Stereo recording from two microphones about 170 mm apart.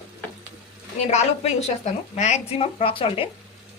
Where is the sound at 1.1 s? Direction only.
40° left (ahead or behind).